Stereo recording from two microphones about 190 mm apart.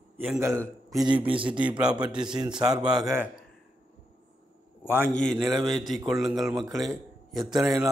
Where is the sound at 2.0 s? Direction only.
25° right (ahead or behind).